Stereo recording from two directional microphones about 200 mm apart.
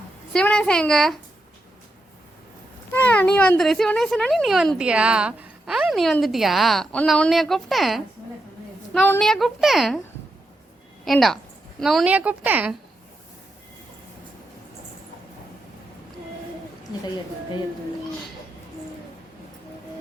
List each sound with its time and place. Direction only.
0.3 s speech: 5° left (ahead or behind)
2.9 s speech: 10° left (ahead or behind)
11.0 s a woman's voice: centre (ahead or behind)